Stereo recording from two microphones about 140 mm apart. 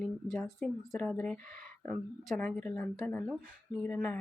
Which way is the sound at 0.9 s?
10° left (ahead or behind).